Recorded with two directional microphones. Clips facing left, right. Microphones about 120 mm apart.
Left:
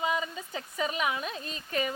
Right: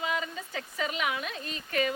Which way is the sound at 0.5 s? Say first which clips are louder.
Left 2 dB; 25° left (ahead or behind).